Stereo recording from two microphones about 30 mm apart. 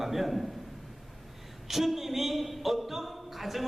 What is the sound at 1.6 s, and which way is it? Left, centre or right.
A man's voice, centre.